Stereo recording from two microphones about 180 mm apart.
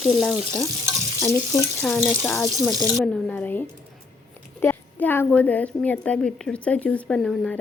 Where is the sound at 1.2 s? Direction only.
15° left (ahead or behind).